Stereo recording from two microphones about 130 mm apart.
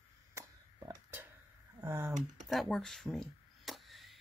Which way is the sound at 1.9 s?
25° right (ahead or behind).